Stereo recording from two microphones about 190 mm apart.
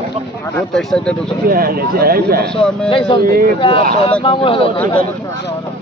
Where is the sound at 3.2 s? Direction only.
50° right (ahead or behind).